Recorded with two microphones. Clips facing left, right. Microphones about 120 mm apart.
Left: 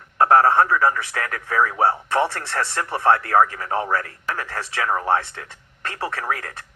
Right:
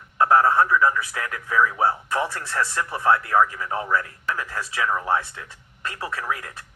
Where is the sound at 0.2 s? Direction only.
40° left (ahead or behind).